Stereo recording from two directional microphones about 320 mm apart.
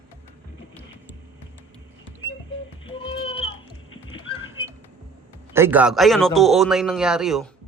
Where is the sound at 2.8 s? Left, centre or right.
Centre.